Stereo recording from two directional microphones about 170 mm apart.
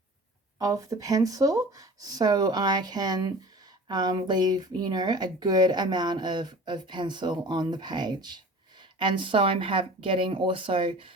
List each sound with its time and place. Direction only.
0.6 s speech: 20° right (ahead or behind)